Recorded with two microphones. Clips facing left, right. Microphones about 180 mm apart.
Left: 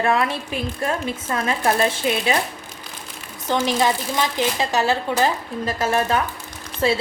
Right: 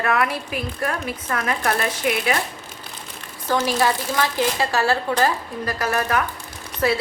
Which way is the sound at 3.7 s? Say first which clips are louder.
Even; 20° left (ahead or behind).